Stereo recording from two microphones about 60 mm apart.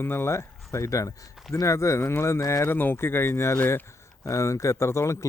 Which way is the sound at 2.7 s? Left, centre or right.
Left.